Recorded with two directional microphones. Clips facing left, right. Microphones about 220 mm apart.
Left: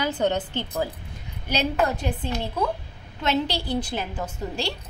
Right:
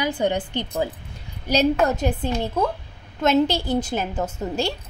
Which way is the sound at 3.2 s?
45° right (ahead or behind).